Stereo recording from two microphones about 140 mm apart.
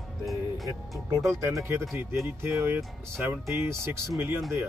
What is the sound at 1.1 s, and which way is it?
Speech, 20° right (ahead or behind).